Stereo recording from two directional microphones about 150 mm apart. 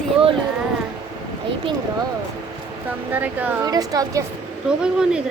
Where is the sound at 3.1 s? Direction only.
10° right (ahead or behind).